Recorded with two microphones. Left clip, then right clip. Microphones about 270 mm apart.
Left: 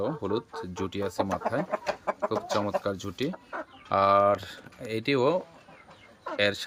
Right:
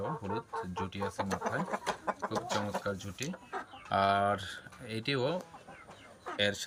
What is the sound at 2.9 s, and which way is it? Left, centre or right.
Speech, centre.